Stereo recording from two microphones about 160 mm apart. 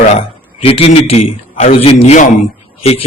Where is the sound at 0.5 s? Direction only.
35° left (ahead or behind).